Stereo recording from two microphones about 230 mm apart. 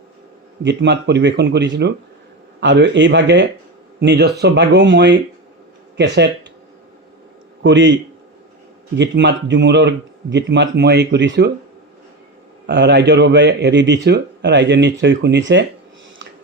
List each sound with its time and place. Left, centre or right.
0.6 s speech: right
7.6 s speech: right
9.0 s speech: right
12.6 s speech: right